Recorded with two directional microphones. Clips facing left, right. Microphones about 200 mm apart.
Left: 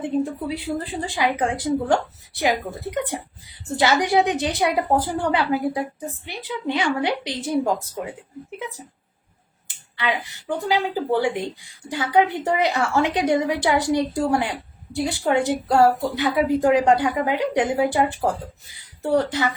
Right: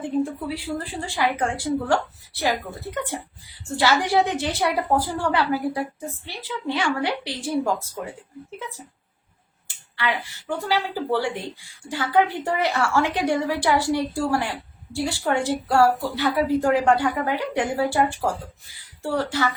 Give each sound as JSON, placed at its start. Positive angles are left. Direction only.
{"t": 0.2, "sound": "a woman's voice", "side_deg": 20}